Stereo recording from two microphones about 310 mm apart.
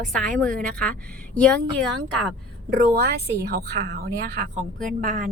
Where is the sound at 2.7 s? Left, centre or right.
Right.